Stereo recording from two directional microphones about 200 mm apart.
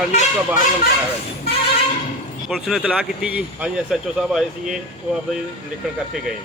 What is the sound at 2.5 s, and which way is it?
A man's voice, centre (ahead or behind).